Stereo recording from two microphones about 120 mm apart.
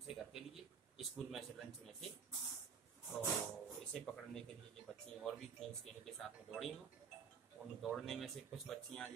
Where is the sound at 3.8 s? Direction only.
5° left (ahead or behind).